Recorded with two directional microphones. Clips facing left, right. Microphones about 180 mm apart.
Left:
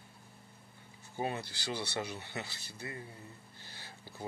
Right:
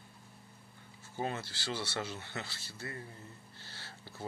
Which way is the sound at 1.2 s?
15° left (ahead or behind).